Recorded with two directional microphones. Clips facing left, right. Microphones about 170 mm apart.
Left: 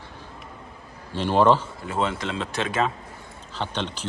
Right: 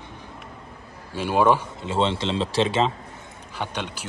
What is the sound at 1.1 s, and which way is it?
Speech, 10° right (ahead or behind).